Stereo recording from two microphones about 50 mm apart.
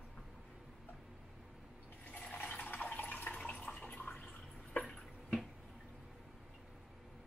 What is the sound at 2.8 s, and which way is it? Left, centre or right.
Water, left.